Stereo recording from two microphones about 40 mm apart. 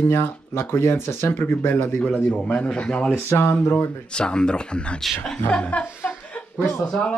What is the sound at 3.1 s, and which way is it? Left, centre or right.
Speech, left.